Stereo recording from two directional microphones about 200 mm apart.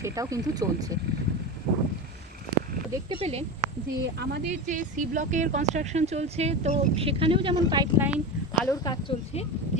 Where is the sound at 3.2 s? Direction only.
30° right (ahead or behind).